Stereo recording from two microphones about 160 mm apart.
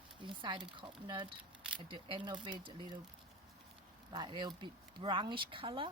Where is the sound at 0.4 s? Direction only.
30° right (ahead or behind).